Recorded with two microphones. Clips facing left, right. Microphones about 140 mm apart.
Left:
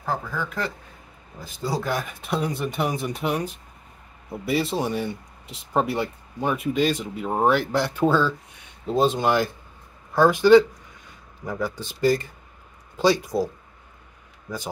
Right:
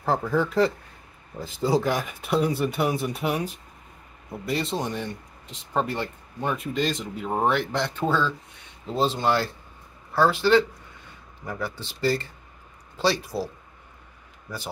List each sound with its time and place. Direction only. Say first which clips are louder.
0.0 s speech: right 5 dB; 25° right (ahead or behind); by 13.5 s 15° left (ahead or behind)